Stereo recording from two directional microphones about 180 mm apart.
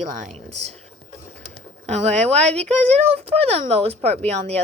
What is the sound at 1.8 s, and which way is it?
A woman's voice, 35° right (ahead or behind).